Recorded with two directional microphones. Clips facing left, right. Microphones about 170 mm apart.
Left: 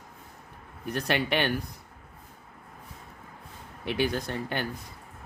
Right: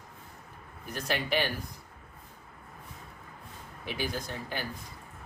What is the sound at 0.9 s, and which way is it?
Speech, 70° left (ahead or behind).